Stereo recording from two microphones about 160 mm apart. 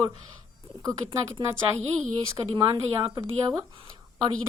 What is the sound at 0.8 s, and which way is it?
Speech, 25° right (ahead or behind).